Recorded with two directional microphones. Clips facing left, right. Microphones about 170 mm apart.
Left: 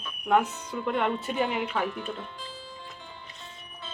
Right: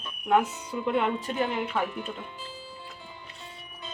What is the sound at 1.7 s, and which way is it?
Speech, 10° right (ahead or behind).